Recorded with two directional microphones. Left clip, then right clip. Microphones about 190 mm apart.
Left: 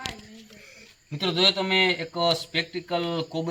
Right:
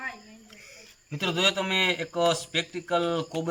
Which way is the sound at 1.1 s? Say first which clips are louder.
Left 3 dB; 5° left (ahead or behind).